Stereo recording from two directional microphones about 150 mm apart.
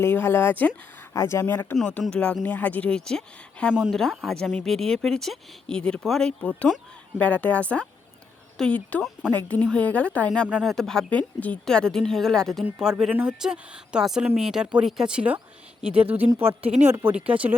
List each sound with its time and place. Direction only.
0.0 s speech: 15° left (ahead or behind); by 15.4 s 5° right (ahead or behind)
16.8 s speech: 15° right (ahead or behind)